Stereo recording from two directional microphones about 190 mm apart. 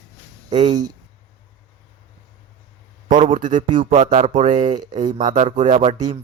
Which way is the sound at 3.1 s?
45° right (ahead or behind).